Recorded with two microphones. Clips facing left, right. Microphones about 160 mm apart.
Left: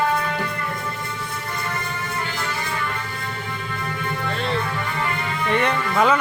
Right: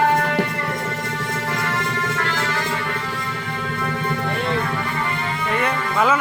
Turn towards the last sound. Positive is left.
turn(degrees=-5)  # may be behind; listen again after turning